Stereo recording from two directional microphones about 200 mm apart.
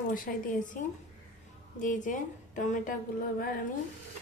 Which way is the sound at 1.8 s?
40° left (ahead or behind).